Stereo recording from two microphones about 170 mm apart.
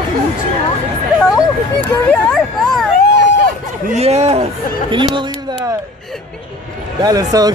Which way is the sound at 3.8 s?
40° right (ahead or behind).